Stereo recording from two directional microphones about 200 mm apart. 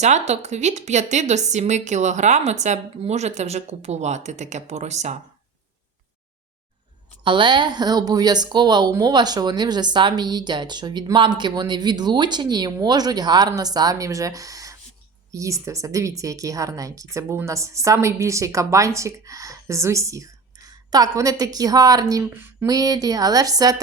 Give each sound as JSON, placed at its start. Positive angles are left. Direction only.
{"t": 0.0, "sound": "a woman's voice", "side_deg": -35}
{"t": 7.3, "sound": "a woman's voice", "side_deg": -25}